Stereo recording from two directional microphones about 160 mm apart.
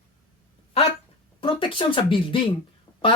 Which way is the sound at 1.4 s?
30° left (ahead or behind).